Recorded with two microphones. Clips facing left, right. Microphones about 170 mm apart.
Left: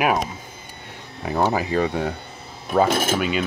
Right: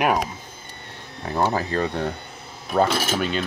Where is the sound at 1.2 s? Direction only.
5° left (ahead or behind).